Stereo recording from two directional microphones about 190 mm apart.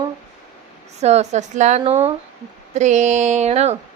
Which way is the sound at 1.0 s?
35° right (ahead or behind).